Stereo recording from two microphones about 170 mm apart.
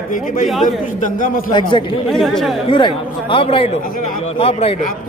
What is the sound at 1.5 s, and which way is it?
Speech, 30° left (ahead or behind).